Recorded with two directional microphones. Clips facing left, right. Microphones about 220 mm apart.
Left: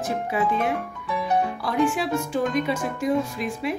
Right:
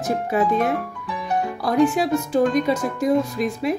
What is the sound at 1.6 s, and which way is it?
Speech, 40° right (ahead or behind).